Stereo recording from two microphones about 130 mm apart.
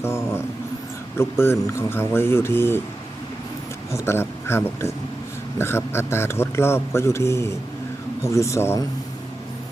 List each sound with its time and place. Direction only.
0.0 s speech: 20° left (ahead or behind)
3.9 s speech: 20° left (ahead or behind)